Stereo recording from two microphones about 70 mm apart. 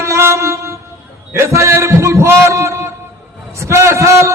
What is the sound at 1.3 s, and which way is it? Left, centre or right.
A man's voice, right.